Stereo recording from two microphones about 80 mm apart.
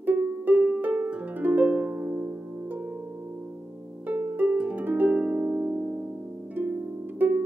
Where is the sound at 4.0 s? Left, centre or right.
Right.